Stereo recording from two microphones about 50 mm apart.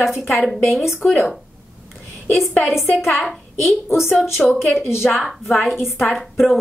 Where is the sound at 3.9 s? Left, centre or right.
Left.